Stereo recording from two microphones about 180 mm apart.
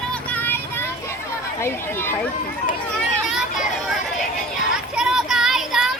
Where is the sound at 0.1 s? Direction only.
10° left (ahead or behind).